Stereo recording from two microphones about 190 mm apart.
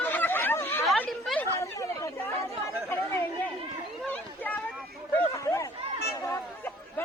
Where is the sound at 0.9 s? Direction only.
5° left (ahead or behind).